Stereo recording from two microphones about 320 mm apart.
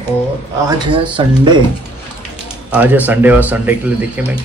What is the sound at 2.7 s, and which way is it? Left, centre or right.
Speech, centre.